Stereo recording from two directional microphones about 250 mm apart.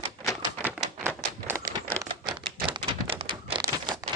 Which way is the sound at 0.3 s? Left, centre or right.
Centre.